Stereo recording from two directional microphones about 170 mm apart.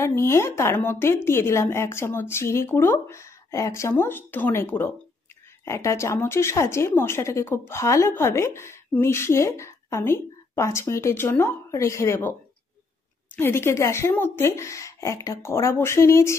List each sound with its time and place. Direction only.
0.0 s a woman's voice: 15° left (ahead or behind)
13.4 s a woman's voice: 15° left (ahead or behind)